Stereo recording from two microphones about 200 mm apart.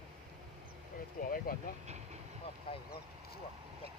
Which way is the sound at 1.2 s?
45° left (ahead or behind).